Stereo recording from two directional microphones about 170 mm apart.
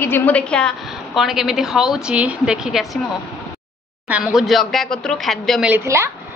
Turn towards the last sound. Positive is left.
turn(degrees=-15)  # may be behind; listen again after turning